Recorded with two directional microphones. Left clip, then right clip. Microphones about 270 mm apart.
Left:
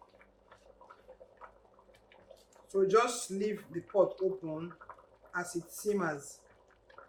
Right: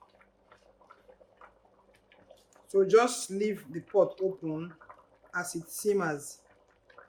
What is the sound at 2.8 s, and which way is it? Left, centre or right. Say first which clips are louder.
Speech: right 3 dB; right.